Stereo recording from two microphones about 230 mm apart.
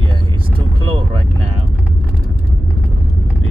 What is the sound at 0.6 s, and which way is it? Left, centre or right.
Vehicle, right.